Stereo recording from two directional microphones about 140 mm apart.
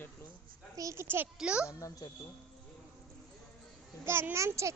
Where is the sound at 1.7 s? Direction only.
25° left (ahead or behind).